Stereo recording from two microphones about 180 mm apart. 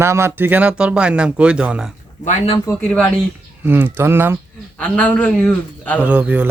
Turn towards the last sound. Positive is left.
turn(degrees=-10)  # may be behind; listen again after turning